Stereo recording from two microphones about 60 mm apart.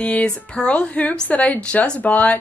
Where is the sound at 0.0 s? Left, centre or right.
Left.